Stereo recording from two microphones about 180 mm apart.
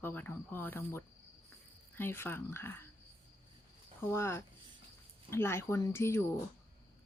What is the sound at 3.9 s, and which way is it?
Speech, 15° left (ahead or behind).